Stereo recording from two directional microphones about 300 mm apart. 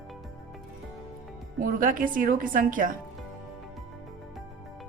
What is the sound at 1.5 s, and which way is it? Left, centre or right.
A woman's voice, right.